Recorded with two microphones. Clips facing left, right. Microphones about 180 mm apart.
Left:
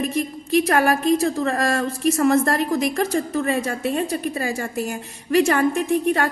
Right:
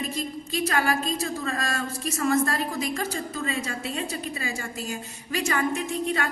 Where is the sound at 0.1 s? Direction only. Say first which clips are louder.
Left 9 dB; 65° left (ahead or behind).